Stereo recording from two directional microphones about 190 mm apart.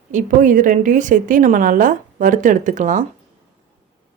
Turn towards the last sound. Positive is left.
turn(degrees=-40)  # may be behind; listen again after turning